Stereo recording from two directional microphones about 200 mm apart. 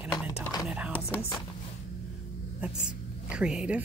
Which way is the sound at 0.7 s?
5° right (ahead or behind).